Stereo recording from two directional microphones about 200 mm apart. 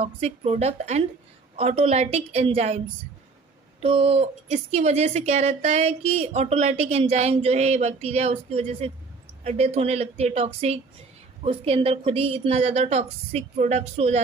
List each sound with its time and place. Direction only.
0.0 s speech: 30° right (ahead or behind)
3.8 s speech: 30° right (ahead or behind)